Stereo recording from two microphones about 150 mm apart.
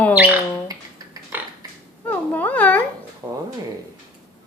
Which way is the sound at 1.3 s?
15° right (ahead or behind).